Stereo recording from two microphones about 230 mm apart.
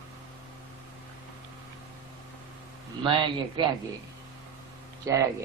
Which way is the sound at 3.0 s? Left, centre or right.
Right.